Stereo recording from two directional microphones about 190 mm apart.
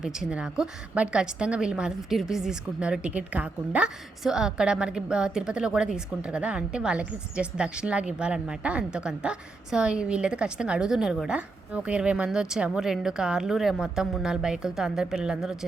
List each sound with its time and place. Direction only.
0.0 s a woman's voice: 5° right (ahead or behind)